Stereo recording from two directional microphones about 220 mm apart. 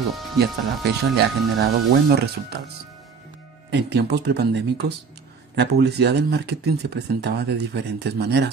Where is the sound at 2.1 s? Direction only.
45° right (ahead or behind).